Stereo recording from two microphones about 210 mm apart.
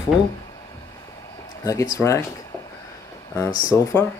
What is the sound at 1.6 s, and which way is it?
Speech, 15° left (ahead or behind).